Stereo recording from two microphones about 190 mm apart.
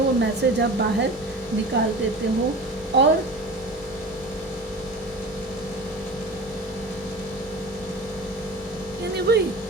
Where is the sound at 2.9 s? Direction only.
70° right (ahead or behind).